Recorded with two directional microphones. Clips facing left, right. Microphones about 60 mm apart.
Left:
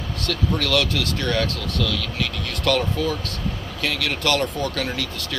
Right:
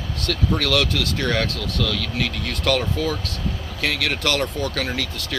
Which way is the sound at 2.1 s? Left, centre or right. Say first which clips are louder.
Right 2 dB; right.